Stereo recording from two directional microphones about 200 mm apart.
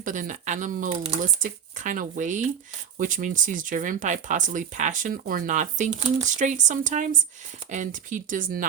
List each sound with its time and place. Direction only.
0.0 s speech: 40° right (ahead or behind)